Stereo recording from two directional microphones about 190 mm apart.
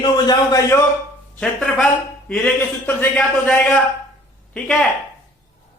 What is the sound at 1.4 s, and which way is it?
A man's voice, 5° left (ahead or behind).